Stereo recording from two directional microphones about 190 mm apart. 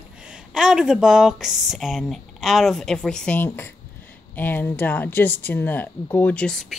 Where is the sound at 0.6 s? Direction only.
5° right (ahead or behind).